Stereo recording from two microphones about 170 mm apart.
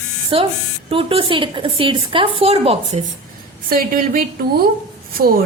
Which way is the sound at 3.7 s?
55° right (ahead or behind).